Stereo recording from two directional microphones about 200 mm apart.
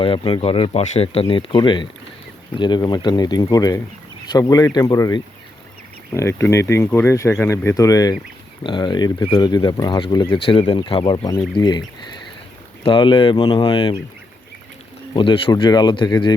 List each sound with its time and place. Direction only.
0.0 s speech: 25° left (ahead or behind)
12.8 s speech: 25° left (ahead or behind)
15.1 s speech: 25° left (ahead or behind)